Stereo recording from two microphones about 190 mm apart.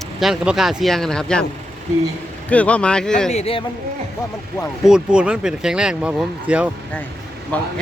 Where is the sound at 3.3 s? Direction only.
30° left (ahead or behind).